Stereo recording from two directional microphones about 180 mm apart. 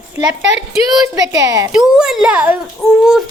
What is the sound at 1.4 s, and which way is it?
Speech, 20° right (ahead or behind).